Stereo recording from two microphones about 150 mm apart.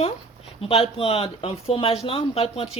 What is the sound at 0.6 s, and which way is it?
Speech, 40° left (ahead or behind).